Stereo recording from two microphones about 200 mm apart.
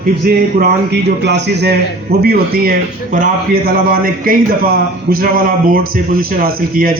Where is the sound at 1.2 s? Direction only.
60° right (ahead or behind).